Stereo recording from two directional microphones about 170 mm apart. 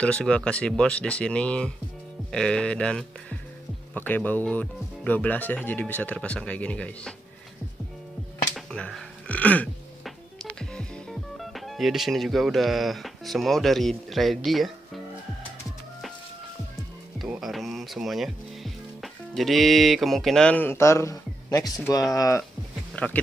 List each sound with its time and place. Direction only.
0.0 s speech: 5° left (ahead or behind)
8.5 s a sound: 5° left (ahead or behind)
10.6 s speech: 5° left (ahead or behind)
17.2 s speech: centre (ahead or behind); by 22.4 s 20° left (ahead or behind)
22.9 s speech: 10° left (ahead or behind)